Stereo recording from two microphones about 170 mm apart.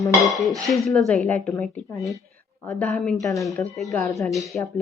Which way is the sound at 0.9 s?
5° left (ahead or behind).